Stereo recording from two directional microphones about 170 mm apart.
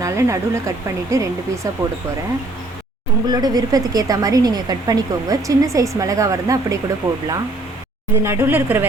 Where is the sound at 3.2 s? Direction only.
25° right (ahead or behind).